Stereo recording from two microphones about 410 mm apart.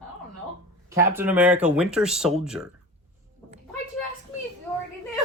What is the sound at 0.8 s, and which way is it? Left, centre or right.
Speech, centre.